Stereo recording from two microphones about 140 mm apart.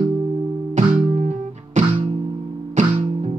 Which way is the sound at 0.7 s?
60° right (ahead or behind).